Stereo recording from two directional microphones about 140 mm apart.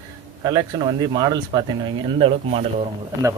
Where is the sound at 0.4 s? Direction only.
30° right (ahead or behind).